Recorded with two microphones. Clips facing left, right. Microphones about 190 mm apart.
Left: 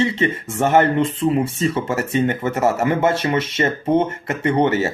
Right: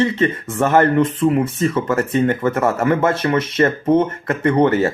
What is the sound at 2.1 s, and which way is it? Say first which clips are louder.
Speech: right 1 dB; 25° left (ahead or behind).